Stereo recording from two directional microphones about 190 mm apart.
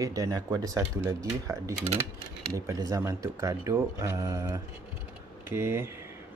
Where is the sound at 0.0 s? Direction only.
15° right (ahead or behind).